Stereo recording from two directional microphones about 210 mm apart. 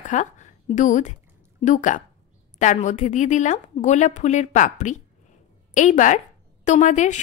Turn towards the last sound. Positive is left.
turn(degrees=35)  # may be behind; listen again after turning